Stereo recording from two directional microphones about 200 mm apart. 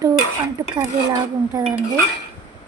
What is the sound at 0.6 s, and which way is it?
Dishes, 15° right (ahead or behind).